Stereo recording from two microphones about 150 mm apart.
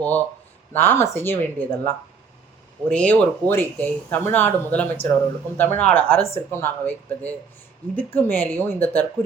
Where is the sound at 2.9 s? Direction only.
10° left (ahead or behind).